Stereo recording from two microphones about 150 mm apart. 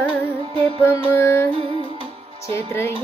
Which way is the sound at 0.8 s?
15° left (ahead or behind).